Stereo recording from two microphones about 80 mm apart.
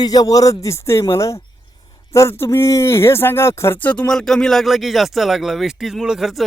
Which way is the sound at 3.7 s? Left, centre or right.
Left.